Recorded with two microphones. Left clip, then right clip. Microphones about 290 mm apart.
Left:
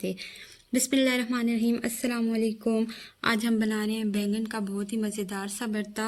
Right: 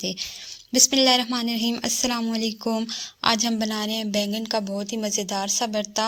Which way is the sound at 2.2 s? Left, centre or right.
Right.